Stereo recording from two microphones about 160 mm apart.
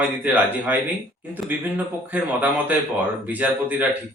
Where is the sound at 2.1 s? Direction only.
10° right (ahead or behind).